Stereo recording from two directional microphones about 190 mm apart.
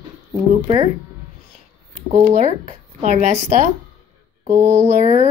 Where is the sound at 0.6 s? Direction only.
25° right (ahead or behind).